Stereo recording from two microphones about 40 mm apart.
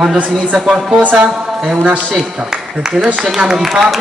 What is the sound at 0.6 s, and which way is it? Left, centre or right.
Speech, centre.